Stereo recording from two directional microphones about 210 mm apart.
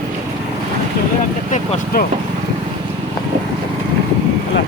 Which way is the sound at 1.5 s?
35° left (ahead or behind).